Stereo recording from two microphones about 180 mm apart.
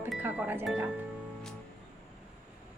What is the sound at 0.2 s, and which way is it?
Speech, 10° right (ahead or behind).